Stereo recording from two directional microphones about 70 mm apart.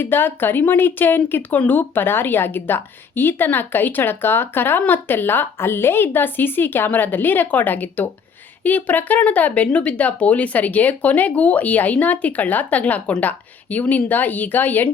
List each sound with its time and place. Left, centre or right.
0.0 s speech: left